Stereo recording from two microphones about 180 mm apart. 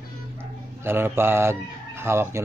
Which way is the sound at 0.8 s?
15° right (ahead or behind).